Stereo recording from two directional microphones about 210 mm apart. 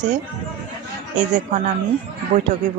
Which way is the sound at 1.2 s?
35° right (ahead or behind).